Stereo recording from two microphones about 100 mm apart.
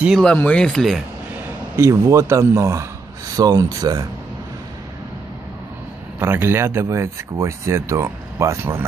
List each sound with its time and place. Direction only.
0.1 s speech: 10° left (ahead or behind)
1.8 s speech: 30° right (ahead or behind)
6.1 s speech: 20° right (ahead or behind)